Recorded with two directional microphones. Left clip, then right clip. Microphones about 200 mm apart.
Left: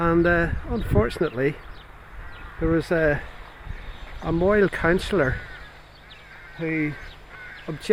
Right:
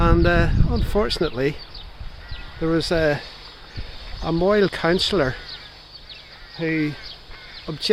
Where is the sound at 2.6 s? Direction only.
5° right (ahead or behind).